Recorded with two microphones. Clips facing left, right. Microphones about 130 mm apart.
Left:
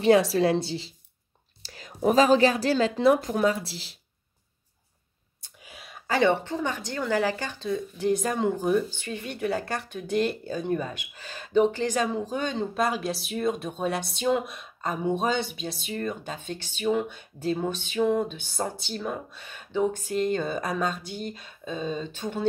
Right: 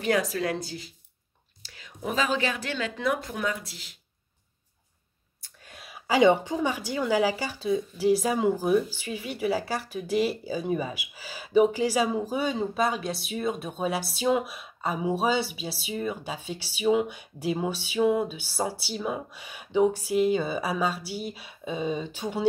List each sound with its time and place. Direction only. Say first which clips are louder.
0.0 s a woman's voice: left 6 dB; 30° left (ahead or behind)
1.6 s a woman's voice: left 9 dB; 40° left (ahead or behind)
6.0 s speech: right 3 dB; 10° right (ahead or behind)